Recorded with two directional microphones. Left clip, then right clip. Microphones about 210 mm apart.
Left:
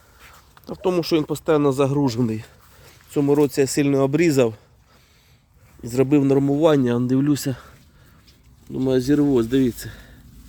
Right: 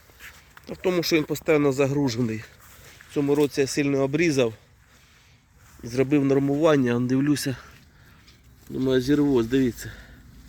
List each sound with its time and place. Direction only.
0.2 s a sound: 5° left (ahead or behind)
0.7 s speech: 10° left (ahead or behind)
5.8 s speech: 15° left (ahead or behind)